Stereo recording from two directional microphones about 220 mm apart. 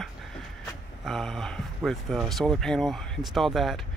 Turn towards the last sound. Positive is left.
turn(degrees=0)  # may be behind; listen again after turning